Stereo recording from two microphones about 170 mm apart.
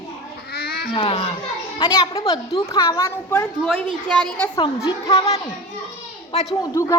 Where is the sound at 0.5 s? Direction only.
65° left (ahead or behind).